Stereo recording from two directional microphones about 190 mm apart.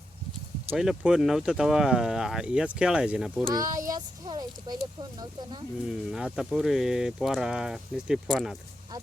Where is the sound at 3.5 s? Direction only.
20° right (ahead or behind).